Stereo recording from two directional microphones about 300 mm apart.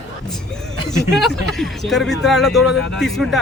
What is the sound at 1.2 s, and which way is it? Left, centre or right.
A man's voice, centre.